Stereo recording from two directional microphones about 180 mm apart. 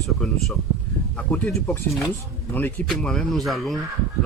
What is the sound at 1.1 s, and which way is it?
A man's voice, 5° left (ahead or behind).